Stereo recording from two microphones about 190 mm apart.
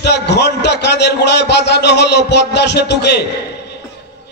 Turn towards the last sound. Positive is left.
turn(degrees=60)  # may be behind; listen again after turning